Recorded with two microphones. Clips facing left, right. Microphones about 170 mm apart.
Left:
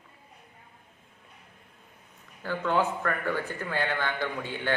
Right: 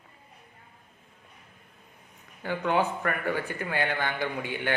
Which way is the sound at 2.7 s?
20° right (ahead or behind).